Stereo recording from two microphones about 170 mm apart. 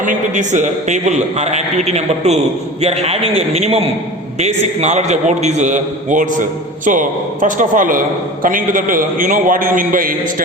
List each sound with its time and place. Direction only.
0.0 s a man's voice: 50° right (ahead or behind)